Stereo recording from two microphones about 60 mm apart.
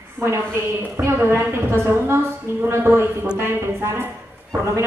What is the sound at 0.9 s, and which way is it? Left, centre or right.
A woman's voice, right.